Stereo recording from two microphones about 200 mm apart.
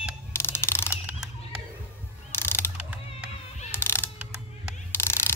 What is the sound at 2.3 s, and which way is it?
Ratchet, 10° left (ahead or behind).